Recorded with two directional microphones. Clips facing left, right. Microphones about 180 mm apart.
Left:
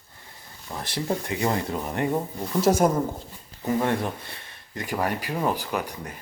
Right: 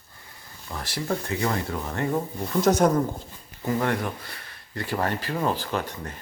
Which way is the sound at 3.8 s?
25° left (ahead or behind).